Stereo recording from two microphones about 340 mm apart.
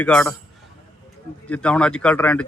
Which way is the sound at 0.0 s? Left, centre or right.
Centre.